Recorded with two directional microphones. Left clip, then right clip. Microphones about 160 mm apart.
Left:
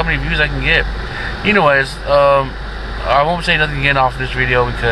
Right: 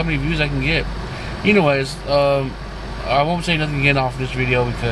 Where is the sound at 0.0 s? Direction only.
25° right (ahead or behind).